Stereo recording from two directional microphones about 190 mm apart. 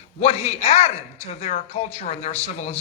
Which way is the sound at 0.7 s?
35° left (ahead or behind).